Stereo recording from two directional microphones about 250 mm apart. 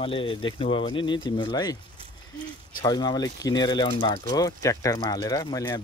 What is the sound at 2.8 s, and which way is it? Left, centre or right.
Speech, centre.